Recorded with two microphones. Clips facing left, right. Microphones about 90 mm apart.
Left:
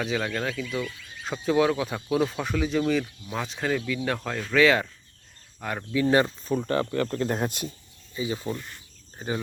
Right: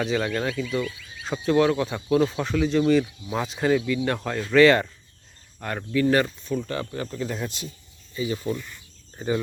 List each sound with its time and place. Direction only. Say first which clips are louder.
0.0 s speech: right 3 dB; centre (ahead or behind)
5.9 s speech: right 1 dB; 15° left (ahead or behind)
6.6 s speech: left 4 dB; 50° left (ahead or behind)
8.1 s speech: right 3 dB; 25° left (ahead or behind)
9.1 s speech: right 5 dB; 10° left (ahead or behind)